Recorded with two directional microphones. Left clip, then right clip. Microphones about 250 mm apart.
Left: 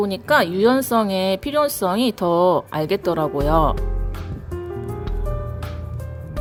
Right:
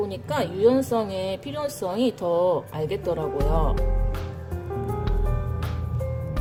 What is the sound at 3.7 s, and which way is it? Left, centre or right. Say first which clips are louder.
Music: right 2 dB; centre.